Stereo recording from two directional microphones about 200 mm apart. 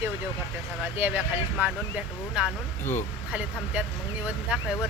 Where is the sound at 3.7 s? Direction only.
5° right (ahead or behind).